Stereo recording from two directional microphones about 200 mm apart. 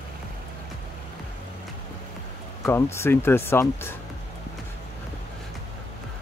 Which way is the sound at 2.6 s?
15° left (ahead or behind).